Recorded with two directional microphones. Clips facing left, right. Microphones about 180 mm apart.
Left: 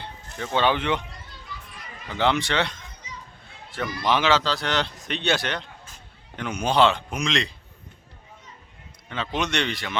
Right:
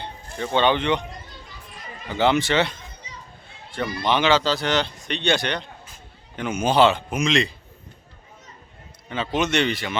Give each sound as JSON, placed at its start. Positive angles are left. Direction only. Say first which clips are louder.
{"t": 0.0, "sound": "a sound", "louder": "right 4 dB", "side_deg": 0}
{"t": 0.6, "sound": "speech", "louder": "right 2 dB", "side_deg": 5}
{"t": 2.0, "sound": "speech", "louder": "right 3 dB", "side_deg": -5}
{"t": 4.0, "sound": "speech", "louder": "right 2 dB", "side_deg": 0}
{"t": 9.0, "sound": "speech", "louder": "right 4 dB", "side_deg": -5}